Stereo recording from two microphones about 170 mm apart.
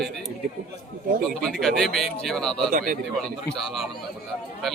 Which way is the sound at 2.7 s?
55° right (ahead or behind).